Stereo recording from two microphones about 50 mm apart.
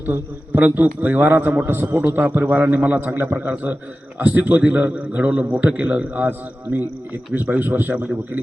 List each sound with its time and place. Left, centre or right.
0.0 s a man's voice: right
2.2 s a man's voice: right
3.5 s a man's voice: right